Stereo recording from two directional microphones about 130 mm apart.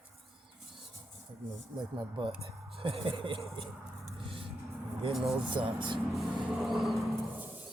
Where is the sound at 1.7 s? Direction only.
35° right (ahead or behind).